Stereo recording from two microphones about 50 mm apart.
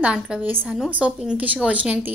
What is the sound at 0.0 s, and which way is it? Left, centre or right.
A woman's voice, centre.